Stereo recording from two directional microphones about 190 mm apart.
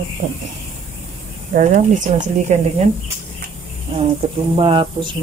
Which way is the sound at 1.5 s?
40° right (ahead or behind).